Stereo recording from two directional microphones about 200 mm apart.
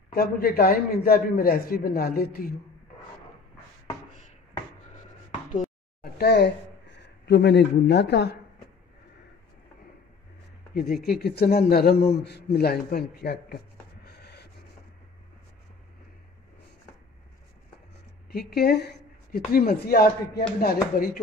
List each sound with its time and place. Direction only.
0.1 s speech: 50° left (ahead or behind)
6.1 s speech: 55° left (ahead or behind)
11.1 s speech: 50° left (ahead or behind)
14.0 s a sound: 55° left (ahead or behind)
18.5 s speech: 55° left (ahead or behind)